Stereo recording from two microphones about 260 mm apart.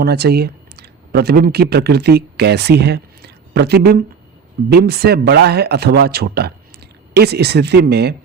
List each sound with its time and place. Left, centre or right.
0.0 s speech: right